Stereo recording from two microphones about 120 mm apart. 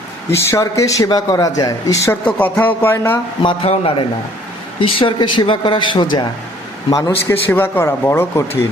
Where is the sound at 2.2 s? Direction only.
15° left (ahead or behind).